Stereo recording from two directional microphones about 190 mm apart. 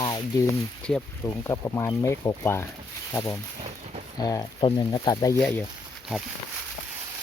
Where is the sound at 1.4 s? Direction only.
15° left (ahead or behind).